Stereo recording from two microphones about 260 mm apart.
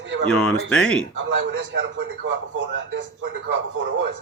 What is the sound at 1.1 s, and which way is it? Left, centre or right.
A man's voice, right.